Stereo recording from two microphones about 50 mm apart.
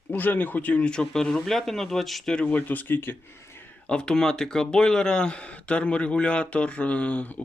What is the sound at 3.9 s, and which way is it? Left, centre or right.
Speech, centre.